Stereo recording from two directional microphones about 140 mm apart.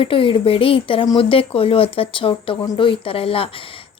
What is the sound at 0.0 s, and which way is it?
A woman's voice, 40° left (ahead or behind).